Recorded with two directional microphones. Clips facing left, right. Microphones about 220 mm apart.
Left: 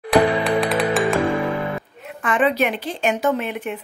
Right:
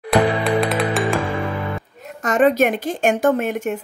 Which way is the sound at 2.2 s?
45° right (ahead or behind).